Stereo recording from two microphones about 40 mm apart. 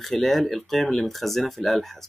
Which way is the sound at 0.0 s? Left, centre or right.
Centre.